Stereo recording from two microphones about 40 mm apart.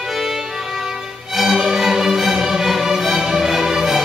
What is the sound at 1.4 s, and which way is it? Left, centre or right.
Music, centre.